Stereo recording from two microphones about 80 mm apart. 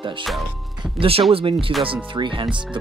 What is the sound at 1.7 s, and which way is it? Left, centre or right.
Speech, right.